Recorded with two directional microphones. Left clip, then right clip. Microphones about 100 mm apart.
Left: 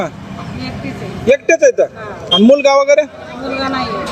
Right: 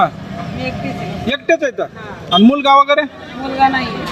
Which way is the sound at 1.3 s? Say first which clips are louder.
Left 6 dB; 45° right (ahead or behind).